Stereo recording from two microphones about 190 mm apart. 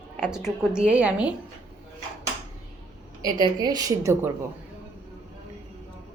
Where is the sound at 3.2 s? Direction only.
20° right (ahead or behind).